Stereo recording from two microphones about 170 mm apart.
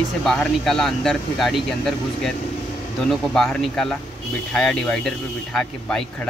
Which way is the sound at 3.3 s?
5° left (ahead or behind).